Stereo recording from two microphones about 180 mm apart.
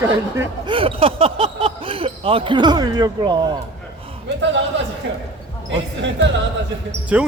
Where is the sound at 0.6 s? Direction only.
30° right (ahead or behind).